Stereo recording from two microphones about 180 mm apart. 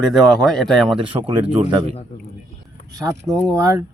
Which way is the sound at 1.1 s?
35° right (ahead or behind).